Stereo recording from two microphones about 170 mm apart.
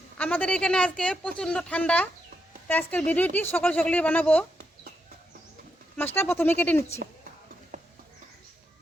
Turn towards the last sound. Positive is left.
turn(degrees=-60)  # may be behind; listen again after turning